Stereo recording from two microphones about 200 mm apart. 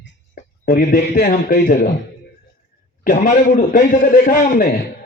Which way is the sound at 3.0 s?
40° left (ahead or behind).